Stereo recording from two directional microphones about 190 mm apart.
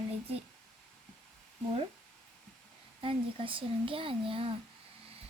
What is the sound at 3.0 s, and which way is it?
Speech, 30° right (ahead or behind).